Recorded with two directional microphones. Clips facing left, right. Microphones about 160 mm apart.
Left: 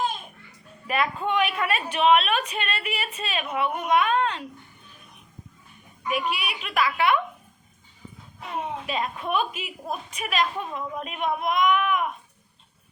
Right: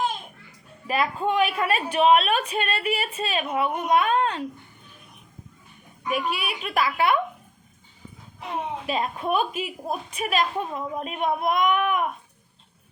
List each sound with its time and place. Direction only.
0.9 s a woman's voice: 35° right (ahead or behind)
6.1 s a woman's voice: 40° right (ahead or behind)
8.9 s a woman's voice: 35° right (ahead or behind)